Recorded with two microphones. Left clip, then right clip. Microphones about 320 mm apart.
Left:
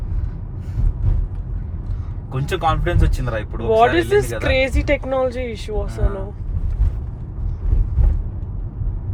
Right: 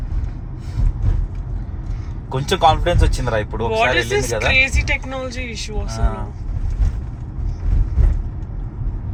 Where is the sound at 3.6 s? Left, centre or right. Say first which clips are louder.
Left 4 dB; centre.